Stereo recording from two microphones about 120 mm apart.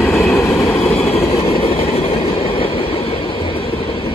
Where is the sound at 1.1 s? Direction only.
55° left (ahead or behind).